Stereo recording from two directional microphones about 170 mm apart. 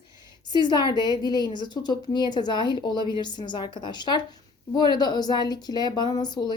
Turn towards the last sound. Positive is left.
turn(degrees=25)  # may be behind; listen again after turning